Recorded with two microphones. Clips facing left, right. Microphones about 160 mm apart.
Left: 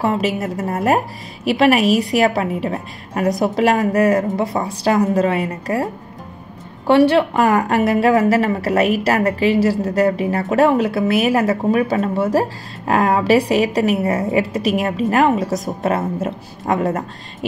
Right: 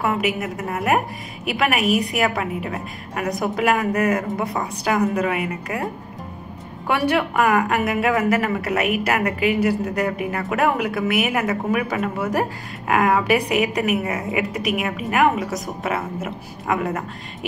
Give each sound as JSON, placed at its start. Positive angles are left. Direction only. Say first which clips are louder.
{"t": 0.0, "sound": "a woman's voice", "louder": "left 3 dB", "side_deg": 30}
{"t": 6.9, "sound": "a woman's voice", "louder": "left 8 dB", "side_deg": 30}